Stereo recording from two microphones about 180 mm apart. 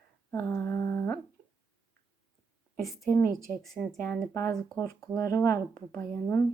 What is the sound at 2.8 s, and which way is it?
Speech, centre (ahead or behind).